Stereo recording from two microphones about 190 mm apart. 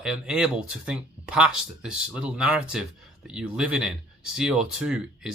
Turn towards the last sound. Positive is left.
turn(degrees=-5)  # may be behind; listen again after turning